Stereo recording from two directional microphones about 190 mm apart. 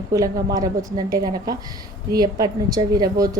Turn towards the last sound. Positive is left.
turn(degrees=-20)  # may be behind; listen again after turning